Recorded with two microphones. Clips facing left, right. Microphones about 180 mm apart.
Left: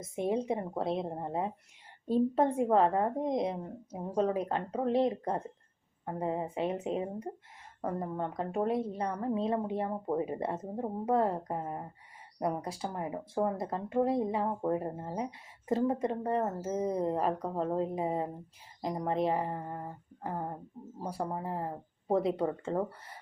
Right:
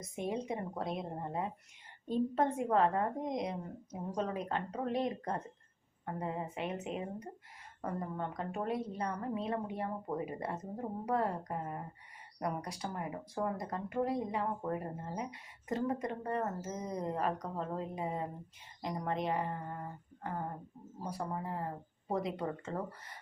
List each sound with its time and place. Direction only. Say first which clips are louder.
0.0 s speech: left 6 dB; 30° left (ahead or behind)